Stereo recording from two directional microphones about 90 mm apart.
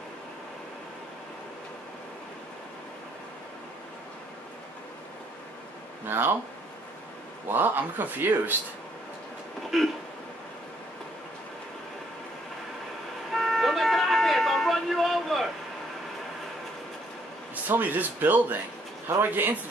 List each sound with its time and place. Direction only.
6.0 s speech: 25° right (ahead or behind)
7.4 s speech: 20° right (ahead or behind)
9.7 s throat clearing: centre (ahead or behind)
13.3 s vehicle: centre (ahead or behind)
17.6 s speech: 20° right (ahead or behind)